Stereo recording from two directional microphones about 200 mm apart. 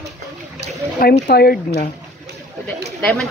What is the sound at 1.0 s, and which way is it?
Speech, 50° left (ahead or behind).